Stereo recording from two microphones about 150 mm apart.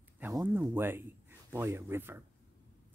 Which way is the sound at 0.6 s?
15° right (ahead or behind).